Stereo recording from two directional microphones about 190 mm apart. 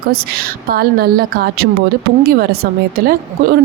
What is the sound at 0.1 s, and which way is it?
Speech, 55° right (ahead or behind).